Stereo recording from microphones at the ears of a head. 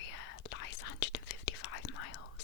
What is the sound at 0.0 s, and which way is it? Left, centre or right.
Whispering, left.